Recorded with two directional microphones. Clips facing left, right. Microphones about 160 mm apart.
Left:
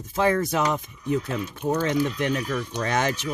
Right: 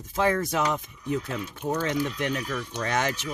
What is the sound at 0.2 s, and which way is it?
Speech, 30° left (ahead or behind).